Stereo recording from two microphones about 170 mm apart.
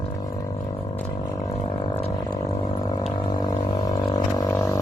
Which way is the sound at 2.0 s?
35° left (ahead or behind).